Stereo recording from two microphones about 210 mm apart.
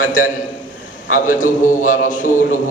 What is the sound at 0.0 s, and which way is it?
Mantra, 40° left (ahead or behind).